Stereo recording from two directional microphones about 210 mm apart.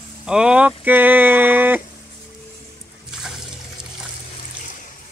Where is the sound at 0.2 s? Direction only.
5° right (ahead or behind).